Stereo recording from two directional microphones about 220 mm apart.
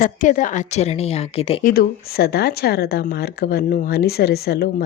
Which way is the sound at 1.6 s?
40° left (ahead or behind).